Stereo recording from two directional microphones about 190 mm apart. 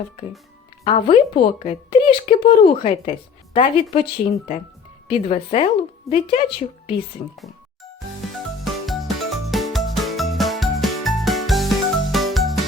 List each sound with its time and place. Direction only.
0.9 s speech: 30° left (ahead or behind)
7.3 s music: centre (ahead or behind)